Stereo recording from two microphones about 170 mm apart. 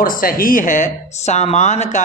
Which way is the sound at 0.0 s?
55° left (ahead or behind).